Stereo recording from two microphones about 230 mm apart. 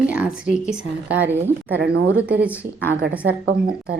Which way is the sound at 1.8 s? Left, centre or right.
Right.